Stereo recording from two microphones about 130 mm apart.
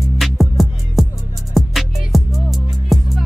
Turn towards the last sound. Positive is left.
turn(degrees=0)  # may be behind; listen again after turning